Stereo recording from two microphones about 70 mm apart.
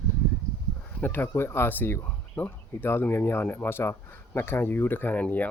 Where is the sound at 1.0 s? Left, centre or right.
Left.